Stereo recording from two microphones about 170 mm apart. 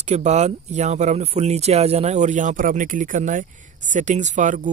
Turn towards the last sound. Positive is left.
turn(degrees=-50)  # may be behind; listen again after turning